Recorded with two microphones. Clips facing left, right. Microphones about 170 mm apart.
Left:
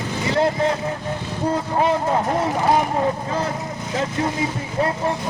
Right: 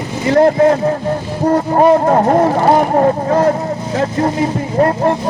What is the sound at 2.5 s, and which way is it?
Speech, 70° right (ahead or behind).